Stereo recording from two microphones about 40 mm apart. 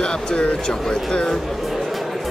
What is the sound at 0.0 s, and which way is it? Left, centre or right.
Speech, left.